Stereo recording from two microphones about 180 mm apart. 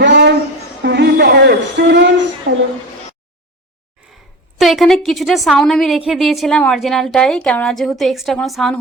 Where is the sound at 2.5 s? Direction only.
55° right (ahead or behind).